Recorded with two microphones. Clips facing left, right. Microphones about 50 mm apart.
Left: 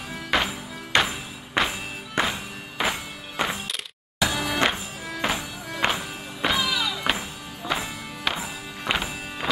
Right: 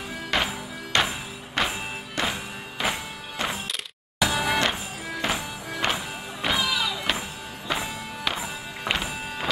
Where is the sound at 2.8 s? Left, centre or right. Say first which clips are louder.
Left 1 dB; centre.